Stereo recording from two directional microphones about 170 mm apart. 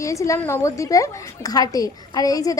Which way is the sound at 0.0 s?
20° left (ahead or behind).